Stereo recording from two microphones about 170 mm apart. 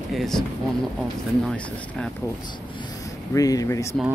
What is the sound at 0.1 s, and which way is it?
Speech, centre (ahead or behind).